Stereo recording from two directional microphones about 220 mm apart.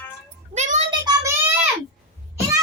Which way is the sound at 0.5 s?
30° right (ahead or behind).